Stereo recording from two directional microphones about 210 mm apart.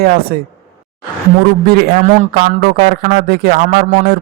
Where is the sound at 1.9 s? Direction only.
40° right (ahead or behind).